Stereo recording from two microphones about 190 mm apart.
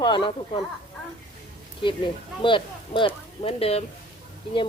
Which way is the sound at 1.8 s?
25° left (ahead or behind).